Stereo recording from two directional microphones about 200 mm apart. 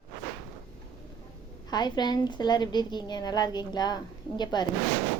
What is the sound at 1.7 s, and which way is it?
A woman's voice, 20° left (ahead or behind).